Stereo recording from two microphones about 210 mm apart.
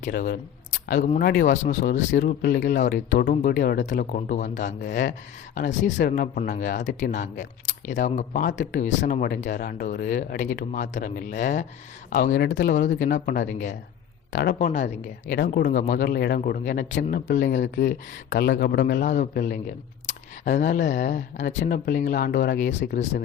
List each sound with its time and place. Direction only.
0.0 s speech: 45° left (ahead or behind)
14.3 s speech: 50° left (ahead or behind)
22.7 s speech: 60° left (ahead or behind)